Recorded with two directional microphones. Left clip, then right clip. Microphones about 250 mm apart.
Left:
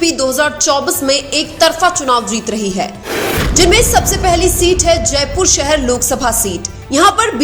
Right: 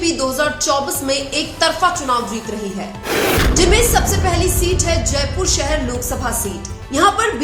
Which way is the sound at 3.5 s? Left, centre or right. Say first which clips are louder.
Left 8 dB; left.